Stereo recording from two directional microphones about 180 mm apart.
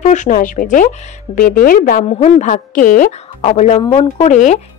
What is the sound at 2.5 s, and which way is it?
Speech, 50° left (ahead or behind).